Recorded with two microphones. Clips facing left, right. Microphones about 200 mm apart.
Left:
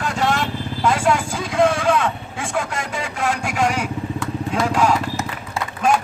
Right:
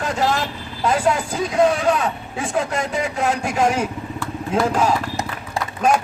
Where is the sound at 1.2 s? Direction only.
20° right (ahead or behind).